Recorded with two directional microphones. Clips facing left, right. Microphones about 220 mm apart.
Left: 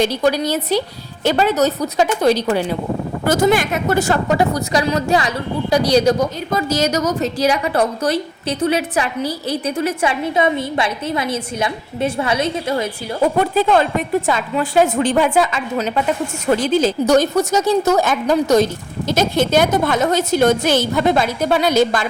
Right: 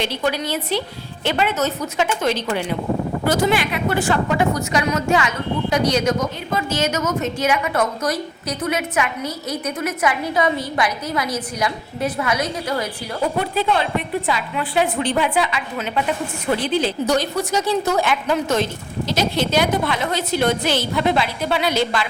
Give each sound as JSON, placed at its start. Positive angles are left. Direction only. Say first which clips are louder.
{"t": 0.0, "sound": "a woman's voice", "louder": "left 6 dB", "side_deg": 40}
{"t": 13.4, "sound": "a woman's voice", "louder": "left 6 dB", "side_deg": 45}